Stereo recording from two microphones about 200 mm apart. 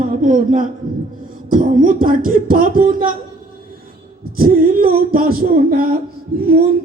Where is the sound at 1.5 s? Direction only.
45° right (ahead or behind).